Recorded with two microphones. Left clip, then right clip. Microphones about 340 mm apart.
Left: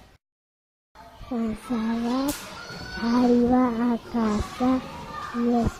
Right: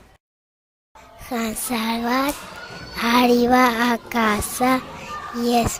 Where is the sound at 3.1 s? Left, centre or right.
Right.